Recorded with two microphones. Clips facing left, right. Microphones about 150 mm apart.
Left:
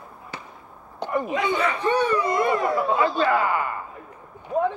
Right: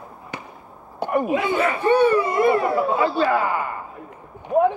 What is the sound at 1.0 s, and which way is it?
Speech, 10° right (ahead or behind).